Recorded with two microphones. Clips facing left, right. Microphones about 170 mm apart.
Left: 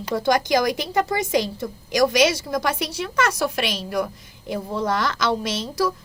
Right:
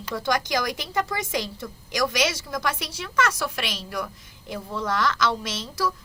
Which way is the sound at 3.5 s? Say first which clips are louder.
Left 7 dB; 20° left (ahead or behind).